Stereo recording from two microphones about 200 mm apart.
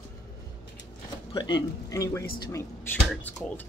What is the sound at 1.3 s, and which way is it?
Speech, 20° left (ahead or behind).